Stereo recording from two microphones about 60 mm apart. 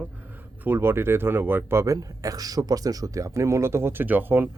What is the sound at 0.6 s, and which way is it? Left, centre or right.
Speech, right.